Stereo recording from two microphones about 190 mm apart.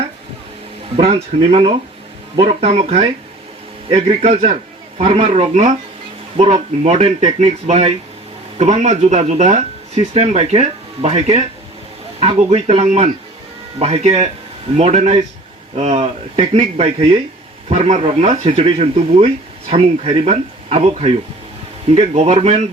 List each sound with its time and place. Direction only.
0.9 s speech: 30° right (ahead or behind)